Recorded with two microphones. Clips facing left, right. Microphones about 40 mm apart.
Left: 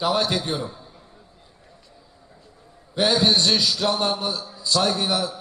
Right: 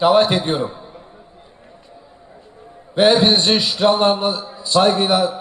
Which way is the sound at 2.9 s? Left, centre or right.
Right.